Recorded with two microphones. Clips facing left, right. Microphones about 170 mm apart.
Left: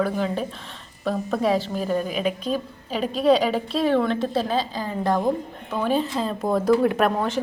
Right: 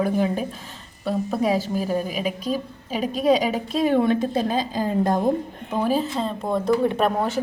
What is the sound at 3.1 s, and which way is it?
Speech, 45° right (ahead or behind).